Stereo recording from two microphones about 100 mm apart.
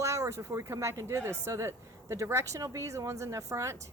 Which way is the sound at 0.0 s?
30° right (ahead or behind).